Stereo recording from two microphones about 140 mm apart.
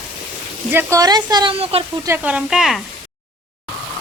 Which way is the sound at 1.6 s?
45° right (ahead or behind).